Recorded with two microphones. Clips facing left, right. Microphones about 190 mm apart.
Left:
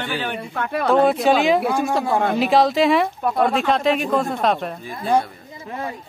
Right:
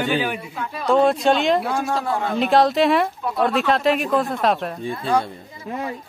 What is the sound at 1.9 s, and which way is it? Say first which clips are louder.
Speech: left 4 dB; 60° left (ahead or behind).